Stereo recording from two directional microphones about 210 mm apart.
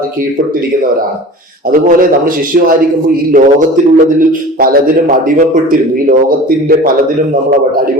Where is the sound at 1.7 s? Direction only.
40° right (ahead or behind).